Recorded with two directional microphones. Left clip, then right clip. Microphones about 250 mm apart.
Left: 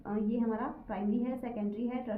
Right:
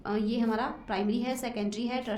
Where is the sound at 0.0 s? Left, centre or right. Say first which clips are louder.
Right 4 dB; right.